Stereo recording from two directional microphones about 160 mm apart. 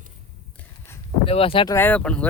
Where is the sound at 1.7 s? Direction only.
10° left (ahead or behind).